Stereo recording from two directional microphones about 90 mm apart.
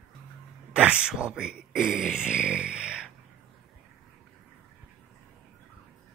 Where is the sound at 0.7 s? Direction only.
10° right (ahead or behind).